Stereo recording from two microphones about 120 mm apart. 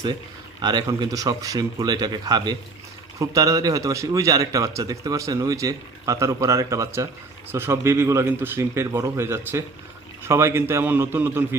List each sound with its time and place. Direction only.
0.6 s a man's voice: 35° right (ahead or behind); by 11.4 s 20° right (ahead or behind)